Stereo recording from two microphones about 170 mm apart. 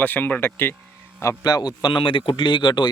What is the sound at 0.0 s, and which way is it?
A man's voice, 10° left (ahead or behind).